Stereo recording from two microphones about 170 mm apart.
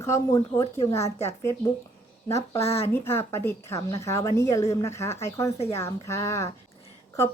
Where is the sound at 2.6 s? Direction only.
35° left (ahead or behind).